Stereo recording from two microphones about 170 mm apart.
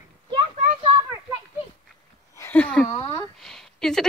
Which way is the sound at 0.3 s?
30° right (ahead or behind).